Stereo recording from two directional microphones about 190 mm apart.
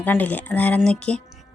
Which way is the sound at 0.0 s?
10° left (ahead or behind).